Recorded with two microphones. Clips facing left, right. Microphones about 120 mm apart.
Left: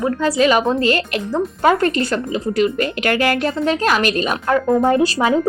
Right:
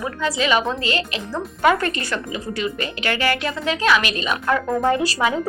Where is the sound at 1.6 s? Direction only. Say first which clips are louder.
Left 3 dB; 35° left (ahead or behind).